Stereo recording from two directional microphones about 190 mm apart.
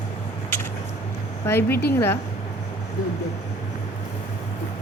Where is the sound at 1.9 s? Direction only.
10° left (ahead or behind).